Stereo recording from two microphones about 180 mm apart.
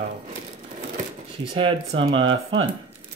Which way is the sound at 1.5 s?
30° right (ahead or behind).